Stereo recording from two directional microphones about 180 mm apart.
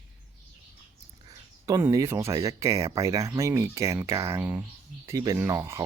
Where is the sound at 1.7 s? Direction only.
20° right (ahead or behind).